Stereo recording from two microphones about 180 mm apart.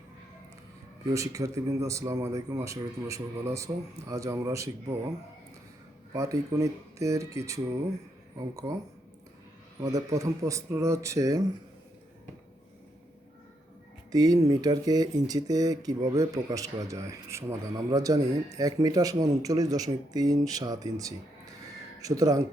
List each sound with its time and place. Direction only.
1.1 s speech: 20° right (ahead or behind)
6.1 s speech: 15° right (ahead or behind)
9.8 s speech: 20° right (ahead or behind)
14.1 s speech: 20° right (ahead or behind)